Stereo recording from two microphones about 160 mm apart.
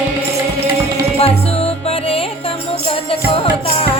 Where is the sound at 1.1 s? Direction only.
40° left (ahead or behind).